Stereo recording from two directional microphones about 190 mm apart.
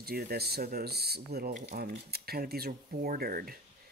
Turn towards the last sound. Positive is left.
turn(degrees=-50)  # may be behind; listen again after turning